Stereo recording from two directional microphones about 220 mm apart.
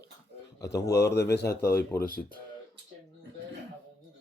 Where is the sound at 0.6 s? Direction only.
15° left (ahead or behind).